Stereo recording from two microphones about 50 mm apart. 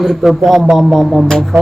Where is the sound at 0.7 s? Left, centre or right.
Centre.